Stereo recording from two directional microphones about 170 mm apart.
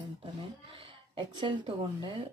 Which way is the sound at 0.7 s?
30° right (ahead or behind).